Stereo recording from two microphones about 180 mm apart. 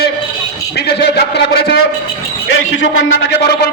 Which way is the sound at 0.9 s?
65° left (ahead or behind).